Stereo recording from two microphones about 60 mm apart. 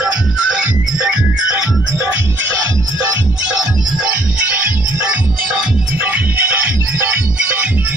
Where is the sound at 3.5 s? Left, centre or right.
Right.